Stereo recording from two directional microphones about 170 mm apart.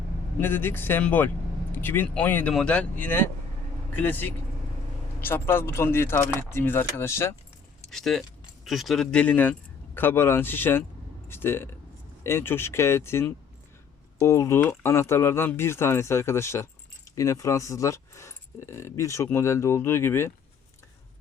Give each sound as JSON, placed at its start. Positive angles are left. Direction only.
{"t": 0.3, "sound": "speech", "side_deg": 10}
{"t": 7.9, "sound": "speech", "side_deg": 0}